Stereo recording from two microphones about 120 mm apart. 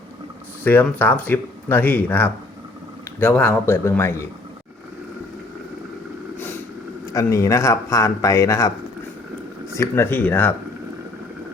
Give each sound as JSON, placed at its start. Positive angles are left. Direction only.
{"t": 0.6, "sound": "speech", "side_deg": 15}
{"t": 7.1, "sound": "speech", "side_deg": 25}
{"t": 9.7, "sound": "speech", "side_deg": 20}